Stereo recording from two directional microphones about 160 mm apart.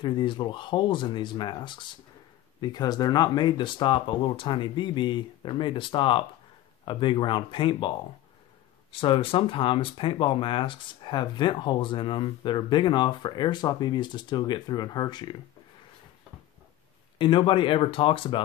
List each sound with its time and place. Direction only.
0.0 s speech: 30° left (ahead or behind)
8.9 s speech: 35° left (ahead or behind)
17.2 s speech: 30° left (ahead or behind)